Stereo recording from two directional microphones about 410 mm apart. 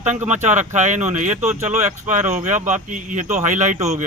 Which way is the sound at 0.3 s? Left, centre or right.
Centre.